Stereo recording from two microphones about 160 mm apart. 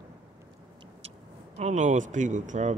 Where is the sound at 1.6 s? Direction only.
50° right (ahead or behind).